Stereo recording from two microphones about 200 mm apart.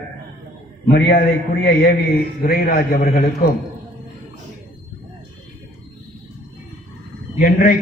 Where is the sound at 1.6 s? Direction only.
50° left (ahead or behind).